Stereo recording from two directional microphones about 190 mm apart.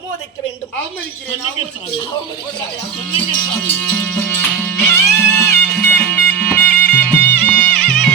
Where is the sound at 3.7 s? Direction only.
10° left (ahead or behind).